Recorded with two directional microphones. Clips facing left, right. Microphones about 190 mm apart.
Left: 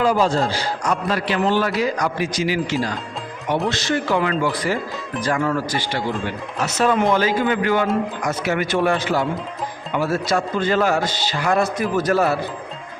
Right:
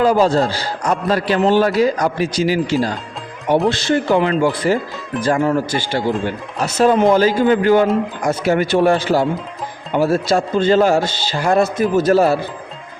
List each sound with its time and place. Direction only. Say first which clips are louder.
0.0 s a man's voice: right 4 dB; 35° right (ahead or behind)